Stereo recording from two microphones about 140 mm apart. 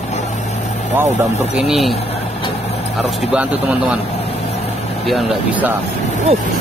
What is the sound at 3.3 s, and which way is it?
Speech, 10° right (ahead or behind).